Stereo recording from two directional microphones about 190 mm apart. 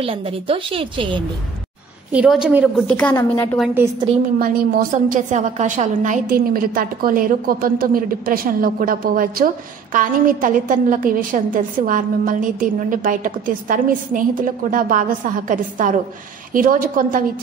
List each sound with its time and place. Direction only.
0.0 s a woman's voice: 30° right (ahead or behind)
2.1 s a woman's voice: 5° right (ahead or behind)
2.9 s a woman's voice: 5° left (ahead or behind)
4.4 s a woman's voice: 50° right (ahead or behind)
6.2 s a woman's voice: 50° right (ahead or behind)